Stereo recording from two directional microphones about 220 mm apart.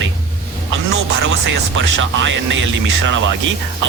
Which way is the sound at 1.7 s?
55° right (ahead or behind).